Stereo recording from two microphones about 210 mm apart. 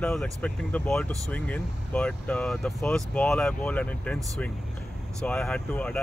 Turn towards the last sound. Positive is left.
turn(degrees=5)  # may be behind; listen again after turning